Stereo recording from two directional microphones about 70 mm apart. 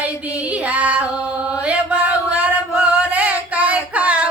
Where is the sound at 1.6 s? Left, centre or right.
Centre.